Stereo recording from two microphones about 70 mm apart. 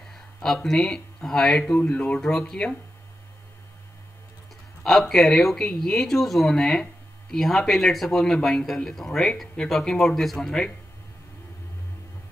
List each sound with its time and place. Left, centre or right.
0.1 s speech: centre
1.8 s speech: left
2.1 s speech: centre
4.8 s speech: centre